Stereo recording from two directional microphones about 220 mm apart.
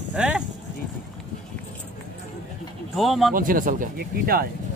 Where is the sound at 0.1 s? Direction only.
5° right (ahead or behind).